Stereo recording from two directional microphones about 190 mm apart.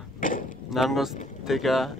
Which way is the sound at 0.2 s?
45° left (ahead or behind).